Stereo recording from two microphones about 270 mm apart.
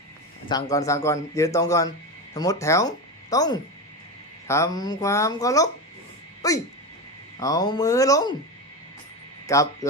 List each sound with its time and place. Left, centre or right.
0.4 s a man's voice: centre
9.5 s a man's voice: centre